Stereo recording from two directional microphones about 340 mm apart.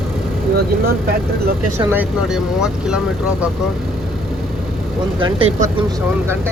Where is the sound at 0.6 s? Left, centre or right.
Right.